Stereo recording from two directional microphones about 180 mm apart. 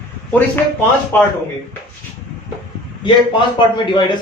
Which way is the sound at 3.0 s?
25° left (ahead or behind).